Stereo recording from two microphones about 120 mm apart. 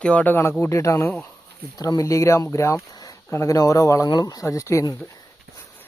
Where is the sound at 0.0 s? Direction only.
10° left (ahead or behind); by 4.9 s 25° left (ahead or behind).